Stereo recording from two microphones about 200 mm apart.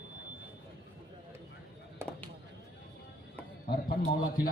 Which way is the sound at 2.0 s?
10° right (ahead or behind).